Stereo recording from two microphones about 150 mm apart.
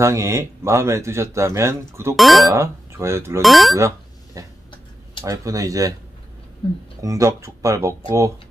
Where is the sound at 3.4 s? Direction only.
Centre (ahead or behind).